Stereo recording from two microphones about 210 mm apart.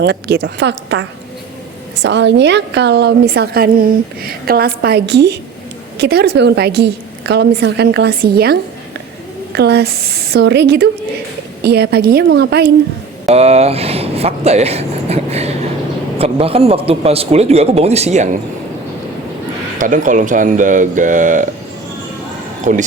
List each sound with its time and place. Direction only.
0.0 s a woman's voice: 55° right (ahead or behind)
9.6 s a woman's voice: 50° right (ahead or behind)
13.2 s a man's voice: 30° right (ahead or behind)
19.8 s speech: 40° right (ahead or behind)
22.7 s speech: 35° right (ahead or behind)